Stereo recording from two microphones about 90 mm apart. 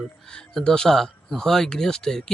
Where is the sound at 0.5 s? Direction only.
10° left (ahead or behind).